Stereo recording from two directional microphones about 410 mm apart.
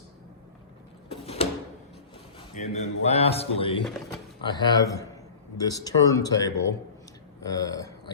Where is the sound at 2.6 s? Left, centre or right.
Centre.